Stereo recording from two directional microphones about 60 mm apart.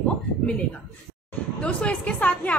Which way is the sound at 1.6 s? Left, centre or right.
Centre.